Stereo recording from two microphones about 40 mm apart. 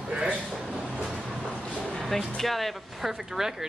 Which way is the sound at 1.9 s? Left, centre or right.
Centre.